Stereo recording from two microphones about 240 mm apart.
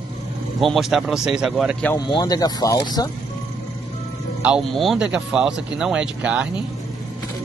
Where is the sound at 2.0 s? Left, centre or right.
Centre.